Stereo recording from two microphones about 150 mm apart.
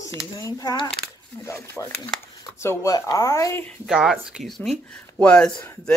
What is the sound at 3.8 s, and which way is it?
Speech, 5° right (ahead or behind).